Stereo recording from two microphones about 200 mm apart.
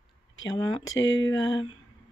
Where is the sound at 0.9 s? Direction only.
70° left (ahead or behind).